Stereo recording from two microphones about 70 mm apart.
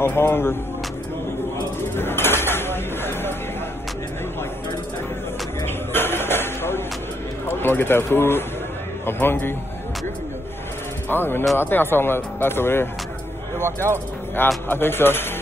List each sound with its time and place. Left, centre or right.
0.0 s speech: left
1.8 s bird: left
5.9 s a sound: left
7.4 s speech: left
11.1 s speech: left
14.7 s speech: left